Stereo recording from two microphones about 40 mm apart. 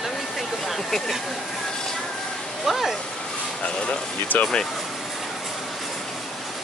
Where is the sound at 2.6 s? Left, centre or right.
Centre.